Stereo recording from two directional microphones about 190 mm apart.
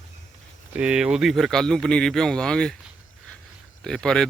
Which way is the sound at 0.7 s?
5° right (ahead or behind).